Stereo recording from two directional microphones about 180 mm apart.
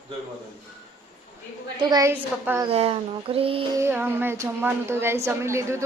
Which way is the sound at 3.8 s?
15° right (ahead or behind).